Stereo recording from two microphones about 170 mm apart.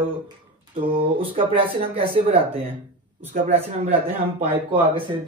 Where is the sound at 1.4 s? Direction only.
30° right (ahead or behind).